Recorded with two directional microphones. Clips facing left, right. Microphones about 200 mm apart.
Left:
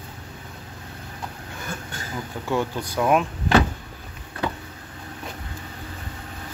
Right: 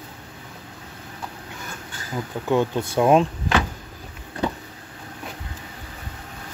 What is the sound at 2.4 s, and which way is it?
Speech, 20° right (ahead or behind).